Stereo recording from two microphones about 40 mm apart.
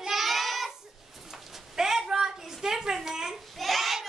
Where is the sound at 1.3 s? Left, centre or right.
Centre.